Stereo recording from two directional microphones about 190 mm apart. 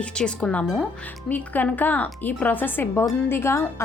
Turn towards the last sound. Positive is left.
turn(degrees=15)  # may be behind; listen again after turning